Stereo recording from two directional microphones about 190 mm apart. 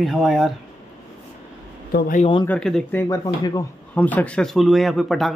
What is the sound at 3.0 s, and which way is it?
Speech, 15° left (ahead or behind).